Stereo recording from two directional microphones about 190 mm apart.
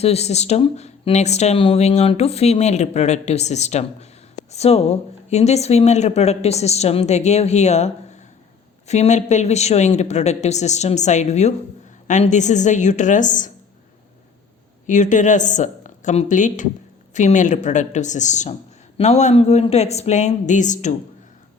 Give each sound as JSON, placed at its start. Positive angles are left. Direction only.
{"t": 0.0, "sound": "speech", "side_deg": 35}
{"t": 8.9, "sound": "speech", "side_deg": 35}
{"t": 14.8, "sound": "speech", "side_deg": 40}